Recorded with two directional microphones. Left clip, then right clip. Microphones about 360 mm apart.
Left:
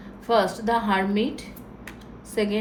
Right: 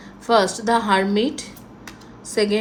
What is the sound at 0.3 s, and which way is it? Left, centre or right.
A woman's voice, centre.